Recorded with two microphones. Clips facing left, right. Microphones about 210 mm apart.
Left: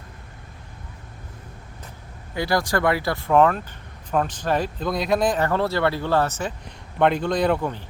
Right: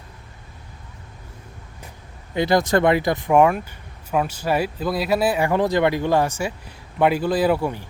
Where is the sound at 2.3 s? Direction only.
20° right (ahead or behind).